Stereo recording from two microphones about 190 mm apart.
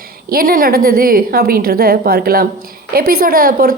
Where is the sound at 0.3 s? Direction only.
50° right (ahead or behind).